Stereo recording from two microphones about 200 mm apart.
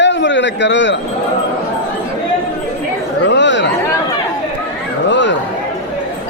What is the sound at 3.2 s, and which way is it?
Chatter, 65° left (ahead or behind).